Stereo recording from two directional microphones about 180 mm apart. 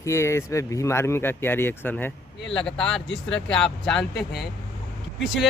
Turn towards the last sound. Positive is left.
turn(degrees=0)  # may be behind; listen again after turning